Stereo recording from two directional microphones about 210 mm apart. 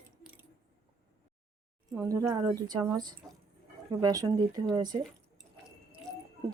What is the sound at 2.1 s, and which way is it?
Speech, 15° right (ahead or behind).